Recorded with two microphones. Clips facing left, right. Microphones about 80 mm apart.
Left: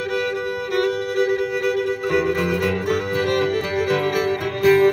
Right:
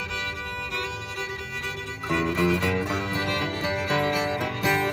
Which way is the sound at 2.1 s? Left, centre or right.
Left.